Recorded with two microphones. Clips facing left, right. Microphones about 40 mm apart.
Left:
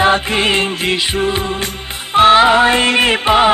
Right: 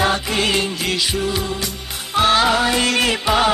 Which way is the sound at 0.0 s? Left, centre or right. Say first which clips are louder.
Left 5 dB; left.